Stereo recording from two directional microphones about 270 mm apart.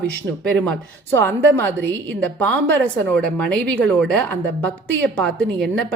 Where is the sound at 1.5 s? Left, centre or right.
Centre.